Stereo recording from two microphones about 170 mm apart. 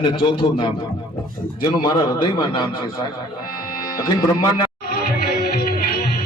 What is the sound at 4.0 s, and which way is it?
Speech, 25° left (ahead or behind).